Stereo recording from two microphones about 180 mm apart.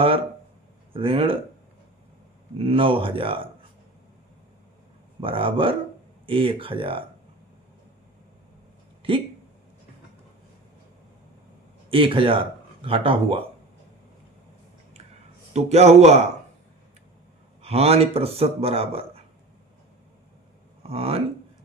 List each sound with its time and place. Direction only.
0.9 s speech: 30° right (ahead or behind)
2.6 s speech: 30° right (ahead or behind)
5.2 s speech: 30° right (ahead or behind)
9.0 s speech: 30° right (ahead or behind)
11.9 s speech: 30° right (ahead or behind)
15.5 s speech: 35° right (ahead or behind)
17.6 s speech: 35° right (ahead or behind)
20.9 s speech: 35° right (ahead or behind)